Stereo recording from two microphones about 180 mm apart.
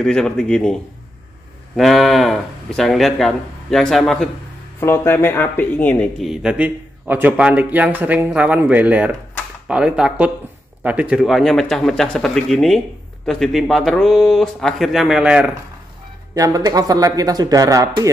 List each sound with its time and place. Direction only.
0.0 s speech: 5° left (ahead or behind)
1.8 s speech: centre (ahead or behind)
4.7 s speech: 15° left (ahead or behind); by 15.5 s 5° right (ahead or behind)
16.3 s speech: 20° right (ahead or behind)